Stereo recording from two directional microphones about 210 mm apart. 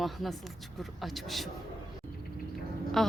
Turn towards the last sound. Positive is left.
turn(degrees=0)  # may be behind; listen again after turning